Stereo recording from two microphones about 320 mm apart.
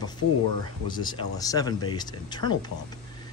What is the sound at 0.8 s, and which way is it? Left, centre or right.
Speech, centre.